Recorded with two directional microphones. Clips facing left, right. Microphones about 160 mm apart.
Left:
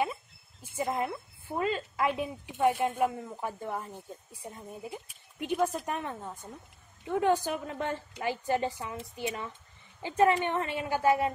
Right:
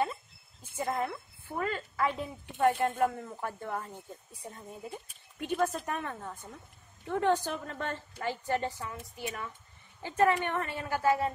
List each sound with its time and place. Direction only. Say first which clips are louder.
0.7 s a woman's voice: left 1 dB; 10° left (ahead or behind)